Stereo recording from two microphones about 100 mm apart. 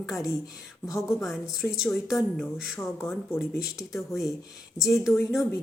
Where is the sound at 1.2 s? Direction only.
5° right (ahead or behind).